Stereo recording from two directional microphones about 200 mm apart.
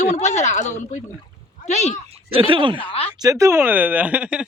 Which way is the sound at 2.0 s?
30° right (ahead or behind).